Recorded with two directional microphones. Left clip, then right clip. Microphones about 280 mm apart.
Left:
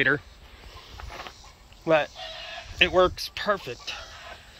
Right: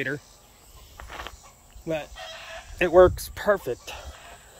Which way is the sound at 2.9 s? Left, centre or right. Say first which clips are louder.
Right 5 dB; right.